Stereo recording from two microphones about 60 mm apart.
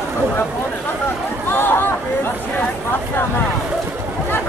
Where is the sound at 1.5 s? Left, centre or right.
Left.